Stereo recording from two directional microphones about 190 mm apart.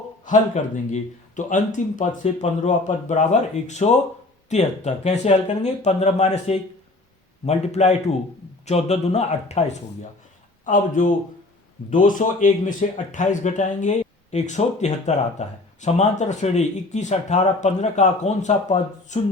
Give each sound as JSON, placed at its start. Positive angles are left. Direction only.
{"t": 0.3, "sound": "speech", "side_deg": 40}